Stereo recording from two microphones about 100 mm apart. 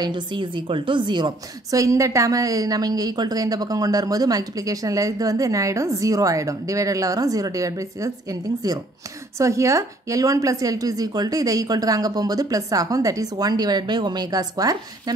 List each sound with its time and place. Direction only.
0.0 s a woman's voice: 50° right (ahead or behind)
1.7 s a woman's voice: 30° right (ahead or behind)